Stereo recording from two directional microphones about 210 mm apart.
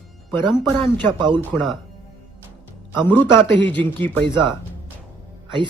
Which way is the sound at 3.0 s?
10° left (ahead or behind).